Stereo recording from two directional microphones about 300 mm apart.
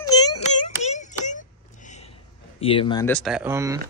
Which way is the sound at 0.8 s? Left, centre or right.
Left.